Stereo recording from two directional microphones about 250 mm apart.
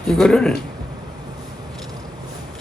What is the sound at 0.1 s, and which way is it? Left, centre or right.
Speech, centre.